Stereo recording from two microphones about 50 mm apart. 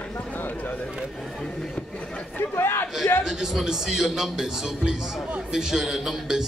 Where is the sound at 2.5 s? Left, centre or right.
Left.